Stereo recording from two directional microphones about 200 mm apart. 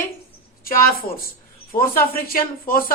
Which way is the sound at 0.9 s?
45° left (ahead or behind).